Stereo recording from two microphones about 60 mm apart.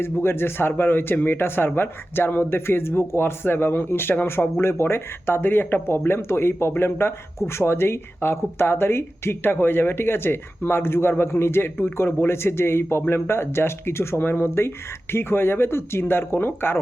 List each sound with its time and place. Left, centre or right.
0.0 s speech: left